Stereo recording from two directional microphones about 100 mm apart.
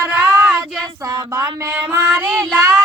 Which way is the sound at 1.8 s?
20° right (ahead or behind).